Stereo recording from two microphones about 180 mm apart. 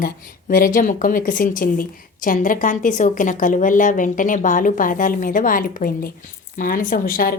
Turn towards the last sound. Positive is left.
turn(degrees=50)  # may be behind; listen again after turning